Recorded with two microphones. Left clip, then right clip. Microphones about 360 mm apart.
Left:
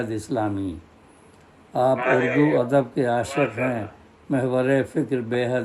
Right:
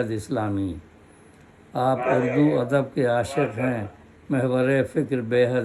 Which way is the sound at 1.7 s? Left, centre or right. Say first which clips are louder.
Left 3 dB; centre.